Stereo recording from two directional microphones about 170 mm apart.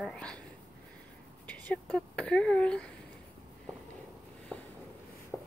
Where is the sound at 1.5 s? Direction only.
10° left (ahead or behind).